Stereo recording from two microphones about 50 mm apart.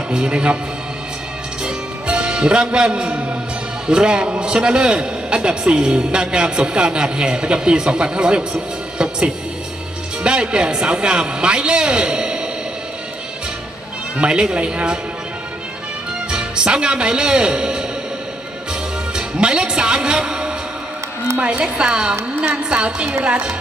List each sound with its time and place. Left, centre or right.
0.1 s a man's voice: right
1.6 s music: centre
3.8 s a man's voice: centre
10.2 s a man's voice: centre
14.2 s a man's voice: centre
16.3 s a man's voice: centre
19.1 s a man's voice: centre